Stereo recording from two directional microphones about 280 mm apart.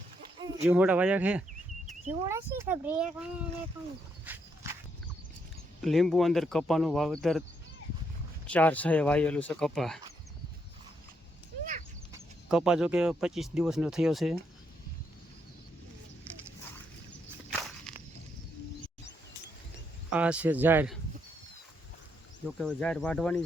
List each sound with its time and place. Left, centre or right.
0.7 s speech: centre
1.9 s cat: right
2.2 s speech: centre
4.3 s walk: centre
5.8 s speech: centre
8.4 s speech: centre
12.1 s speech: centre
20.1 s speech: centre
22.4 s speech: centre